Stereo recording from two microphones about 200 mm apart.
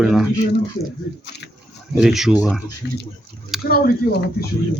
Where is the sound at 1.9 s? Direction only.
Centre (ahead or behind).